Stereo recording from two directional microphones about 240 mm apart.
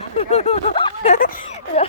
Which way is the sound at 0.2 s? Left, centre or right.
Left.